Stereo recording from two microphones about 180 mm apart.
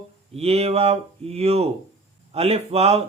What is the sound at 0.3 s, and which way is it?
Mantra, 35° right (ahead or behind).